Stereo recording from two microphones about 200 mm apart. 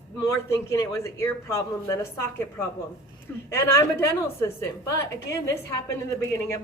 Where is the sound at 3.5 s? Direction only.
15° left (ahead or behind).